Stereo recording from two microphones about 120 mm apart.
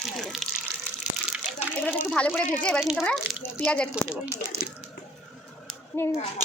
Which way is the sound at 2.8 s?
5° right (ahead or behind).